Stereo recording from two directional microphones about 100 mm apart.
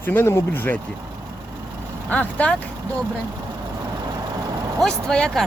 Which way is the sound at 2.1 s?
15° left (ahead or behind).